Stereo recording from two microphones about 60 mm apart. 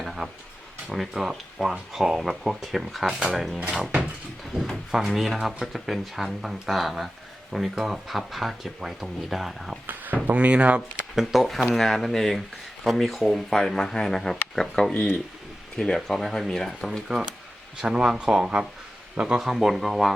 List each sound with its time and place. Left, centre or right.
0.0 s a sound: centre
0.9 s speech: centre
4.5 s a sound: centre
4.9 s speech: centre
9.8 s speech: right
11.1 s speech: centre
16.0 s speech: centre
17.7 s speech: centre
19.4 s speech: centre